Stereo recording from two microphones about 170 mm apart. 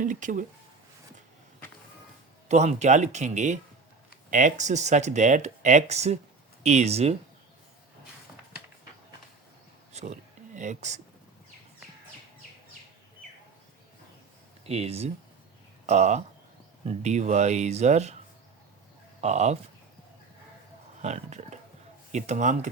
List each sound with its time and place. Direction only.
0.0 s speech: 50° right (ahead or behind)
2.5 s speech: 40° right (ahead or behind)
9.9 s a sound: 40° right (ahead or behind)
14.7 s speech: 35° right (ahead or behind)
19.2 s speech: 40° right (ahead or behind)
21.0 s speech: 40° right (ahead or behind)